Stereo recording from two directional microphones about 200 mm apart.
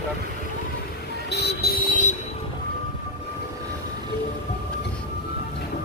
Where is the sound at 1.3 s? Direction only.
55° left (ahead or behind).